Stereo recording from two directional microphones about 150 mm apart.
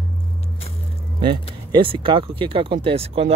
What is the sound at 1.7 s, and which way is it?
Speech, 35° right (ahead or behind).